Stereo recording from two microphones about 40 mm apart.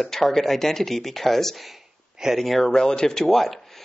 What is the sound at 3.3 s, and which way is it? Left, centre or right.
Speech, centre.